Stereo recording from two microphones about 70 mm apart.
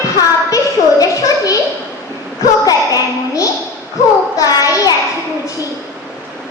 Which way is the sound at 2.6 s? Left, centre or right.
Left.